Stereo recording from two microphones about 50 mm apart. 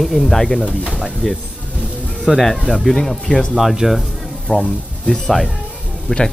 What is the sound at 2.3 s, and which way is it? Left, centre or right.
Speech, centre.